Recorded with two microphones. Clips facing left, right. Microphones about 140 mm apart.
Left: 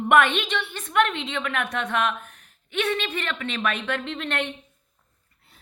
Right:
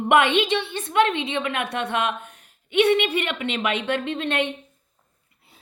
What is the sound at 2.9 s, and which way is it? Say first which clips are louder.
A woman's voice: right 7 dB; 20° right (ahead or behind).